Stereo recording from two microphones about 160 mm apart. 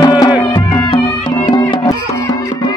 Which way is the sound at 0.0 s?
25° left (ahead or behind).